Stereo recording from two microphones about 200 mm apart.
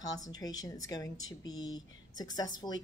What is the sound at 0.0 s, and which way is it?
A woman's voice, 20° left (ahead or behind).